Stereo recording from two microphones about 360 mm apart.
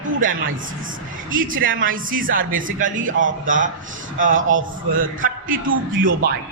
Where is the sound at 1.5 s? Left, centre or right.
Right.